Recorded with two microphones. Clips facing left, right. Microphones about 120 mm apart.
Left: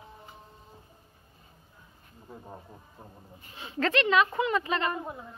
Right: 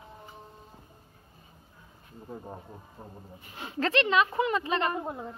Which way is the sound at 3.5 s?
35° right (ahead or behind).